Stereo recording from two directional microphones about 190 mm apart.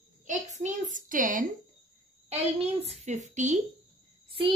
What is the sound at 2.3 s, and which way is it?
A woman's voice, 35° right (ahead or behind).